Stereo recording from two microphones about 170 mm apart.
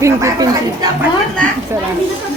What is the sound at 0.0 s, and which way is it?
Speech, 20° right (ahead or behind).